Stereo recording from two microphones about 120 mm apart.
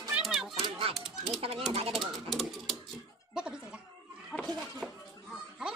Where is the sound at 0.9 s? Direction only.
Centre (ahead or behind).